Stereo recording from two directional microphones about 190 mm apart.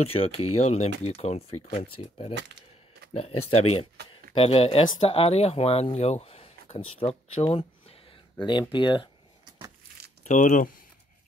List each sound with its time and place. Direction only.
0.0 s speech: 30° left (ahead or behind)
10.2 s speech: 40° left (ahead or behind)